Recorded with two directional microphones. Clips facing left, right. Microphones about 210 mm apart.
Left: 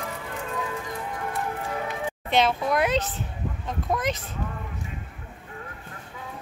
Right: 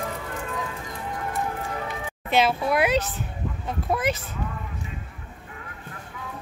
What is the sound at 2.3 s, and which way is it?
A child's voice, 5° right (ahead or behind).